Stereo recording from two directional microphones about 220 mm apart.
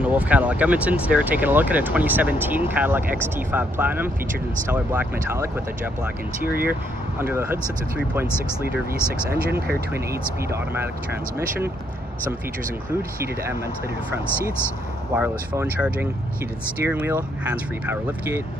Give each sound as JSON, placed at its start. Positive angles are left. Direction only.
{"t": 0.0, "sound": "speech", "side_deg": -5}
{"t": 6.5, "sound": "speech", "side_deg": -40}
{"t": 7.2, "sound": "speech", "side_deg": -10}
{"t": 9.3, "sound": "speech", "side_deg": -45}
{"t": 15.1, "sound": "speech", "side_deg": -5}